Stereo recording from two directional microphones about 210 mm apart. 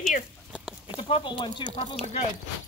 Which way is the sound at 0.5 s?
5° right (ahead or behind).